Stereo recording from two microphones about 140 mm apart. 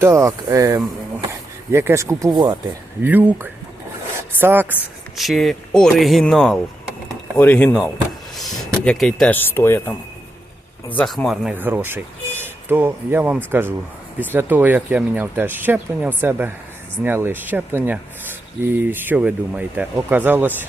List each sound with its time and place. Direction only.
0.0 s speech: 20° right (ahead or behind)
3.0 s speech: 15° right (ahead or behind)
5.1 s speech: centre (ahead or behind)
8.4 s a sound: centre (ahead or behind)
9.4 s speech: 15° left (ahead or behind)
10.9 s speech: 5° left (ahead or behind)
11.5 s speech: 15° right (ahead or behind)